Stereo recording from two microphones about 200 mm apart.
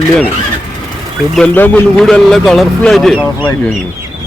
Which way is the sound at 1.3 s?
5° left (ahead or behind).